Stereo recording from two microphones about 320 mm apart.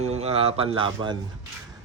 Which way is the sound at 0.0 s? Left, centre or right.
Centre.